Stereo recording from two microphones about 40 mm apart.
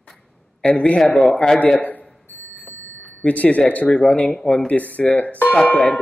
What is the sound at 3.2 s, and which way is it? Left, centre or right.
Speech, left.